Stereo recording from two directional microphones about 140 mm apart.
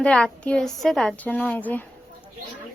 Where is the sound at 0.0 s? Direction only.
10° left (ahead or behind).